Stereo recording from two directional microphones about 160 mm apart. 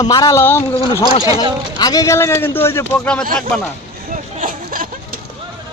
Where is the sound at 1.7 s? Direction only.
25° left (ahead or behind); by 3.7 s 5° left (ahead or behind).